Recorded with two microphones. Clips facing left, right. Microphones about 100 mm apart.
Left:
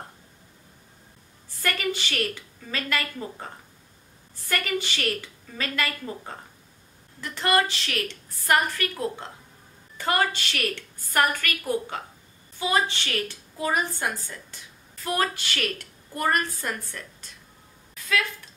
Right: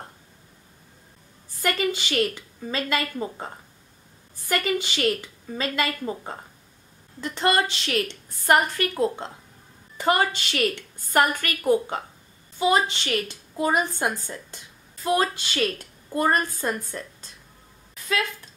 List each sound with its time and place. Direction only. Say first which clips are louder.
1.6 s a woman's voice: right 3 dB; 20° right (ahead or behind)